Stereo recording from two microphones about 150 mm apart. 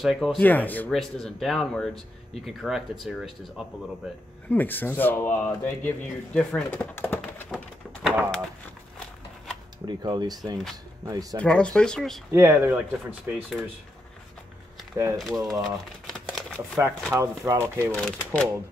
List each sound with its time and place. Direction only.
0.0 s speech: centre (ahead or behind)
0.4 s speech: 10° left (ahead or behind)
4.5 s speech: 15° left (ahead or behind)
7.5 s bird: 5° right (ahead or behind)
9.8 s speech: 30° right (ahead or behind)
11.3 s speech: 5° left (ahead or behind)
12.3 s speech: 20° right (ahead or behind)
13.3 s speech: centre (ahead or behind)
15.1 s speech: centre (ahead or behind)
15.6 s typewriter: centre (ahead or behind)
17.1 s speech: 20° right (ahead or behind)
17.9 s speech: 5° left (ahead or behind)